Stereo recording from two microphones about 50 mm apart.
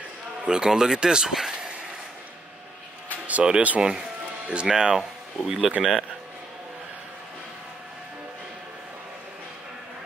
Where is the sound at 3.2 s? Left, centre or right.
Right.